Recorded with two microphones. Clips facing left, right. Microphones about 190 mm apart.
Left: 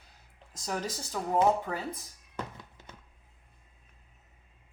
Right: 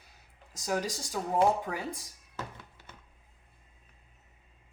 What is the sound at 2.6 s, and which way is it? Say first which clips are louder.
Thunk: left 2 dB; 15° left (ahead or behind).